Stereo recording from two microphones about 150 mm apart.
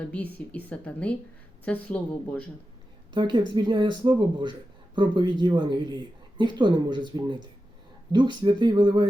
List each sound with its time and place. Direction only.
0.0 s a woman's voice: 10° left (ahead or behind)
3.1 s speech: 30° right (ahead or behind)